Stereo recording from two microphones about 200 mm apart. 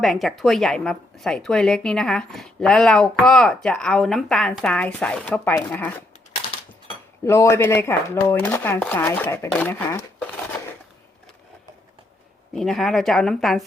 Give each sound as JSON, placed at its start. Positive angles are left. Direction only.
{"t": 0.0, "sound": "a woman's voice", "side_deg": 0}
{"t": 6.4, "sound": "a sound", "side_deg": 30}
{"t": 7.3, "sound": "speech", "side_deg": 15}
{"t": 12.5, "sound": "a woman's voice", "side_deg": 0}